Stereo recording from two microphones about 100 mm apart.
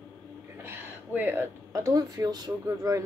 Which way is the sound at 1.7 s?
35° right (ahead or behind).